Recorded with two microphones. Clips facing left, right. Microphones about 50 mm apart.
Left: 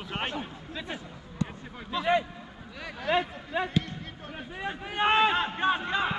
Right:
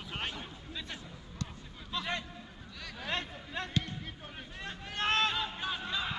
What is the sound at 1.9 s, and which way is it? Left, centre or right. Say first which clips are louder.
Speech: left 11 dB; centre.